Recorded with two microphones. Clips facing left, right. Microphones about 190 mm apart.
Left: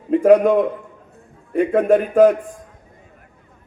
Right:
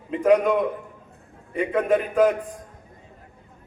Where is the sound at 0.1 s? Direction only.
50° left (ahead or behind).